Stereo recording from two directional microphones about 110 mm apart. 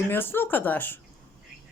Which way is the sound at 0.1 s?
20° left (ahead or behind).